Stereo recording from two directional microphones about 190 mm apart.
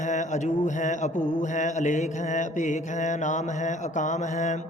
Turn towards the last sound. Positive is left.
turn(degrees=40)  # may be behind; listen again after turning